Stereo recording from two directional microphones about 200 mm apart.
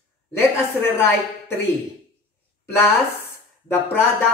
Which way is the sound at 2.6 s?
10° left (ahead or behind).